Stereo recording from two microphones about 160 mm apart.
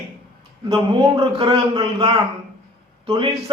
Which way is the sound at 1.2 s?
35° right (ahead or behind).